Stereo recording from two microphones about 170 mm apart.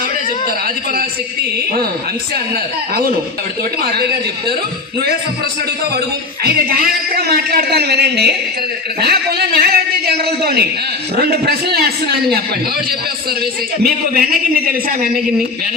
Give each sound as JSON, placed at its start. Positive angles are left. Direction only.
{"t": 6.4, "sound": "a man's voice", "side_deg": -65}
{"t": 13.4, "sound": "a man's voice", "side_deg": -60}